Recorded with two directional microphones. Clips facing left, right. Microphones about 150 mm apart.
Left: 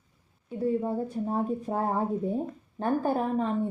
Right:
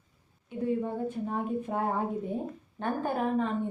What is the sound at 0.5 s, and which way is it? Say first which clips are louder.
A woman's voice: left 3 dB; 35° left (ahead or behind).